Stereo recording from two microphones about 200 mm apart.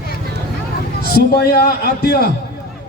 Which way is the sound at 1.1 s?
50° left (ahead or behind).